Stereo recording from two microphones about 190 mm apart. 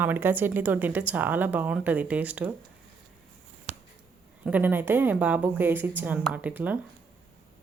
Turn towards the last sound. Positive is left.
turn(degrees=-10)  # may be behind; listen again after turning